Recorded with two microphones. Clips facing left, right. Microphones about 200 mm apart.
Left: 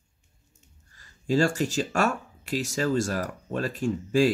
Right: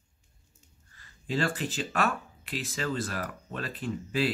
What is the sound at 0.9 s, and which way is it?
Speech, 40° left (ahead or behind).